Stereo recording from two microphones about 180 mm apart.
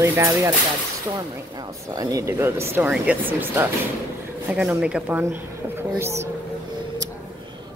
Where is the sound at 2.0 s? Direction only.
20° right (ahead or behind).